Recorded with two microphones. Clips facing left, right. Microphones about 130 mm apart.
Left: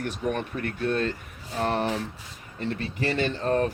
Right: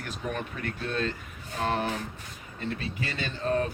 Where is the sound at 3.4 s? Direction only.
50° left (ahead or behind).